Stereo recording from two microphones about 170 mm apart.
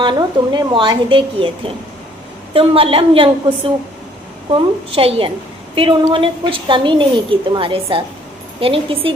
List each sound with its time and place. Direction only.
0.0 s a woman's voice: 25° right (ahead or behind)
4.4 s a woman's voice: 30° right (ahead or behind)